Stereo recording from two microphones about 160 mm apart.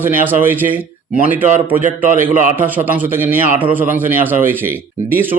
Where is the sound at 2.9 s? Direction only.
10° right (ahead or behind).